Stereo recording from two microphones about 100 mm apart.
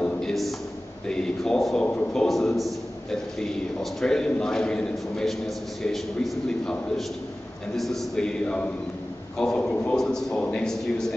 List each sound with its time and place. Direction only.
0.0 s a sound: 5° left (ahead or behind)
1.0 s a man's voice: 5° left (ahead or behind)
2.2 s a man's voice: centre (ahead or behind)
7.7 s a man's voice: centre (ahead or behind)